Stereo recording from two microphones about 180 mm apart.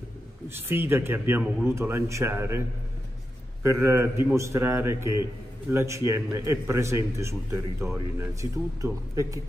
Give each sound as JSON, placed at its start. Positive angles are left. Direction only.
{"t": 0.5, "sound": "a man's voice", "side_deg": -10}
{"t": 3.6, "sound": "a man's voice", "side_deg": -15}